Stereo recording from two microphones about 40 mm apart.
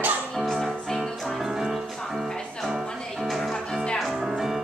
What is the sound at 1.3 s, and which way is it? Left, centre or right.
Music, centre.